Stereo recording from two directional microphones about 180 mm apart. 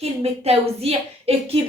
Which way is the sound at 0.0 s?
35° right (ahead or behind).